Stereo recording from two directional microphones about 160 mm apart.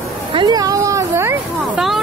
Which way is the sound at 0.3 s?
30° right (ahead or behind).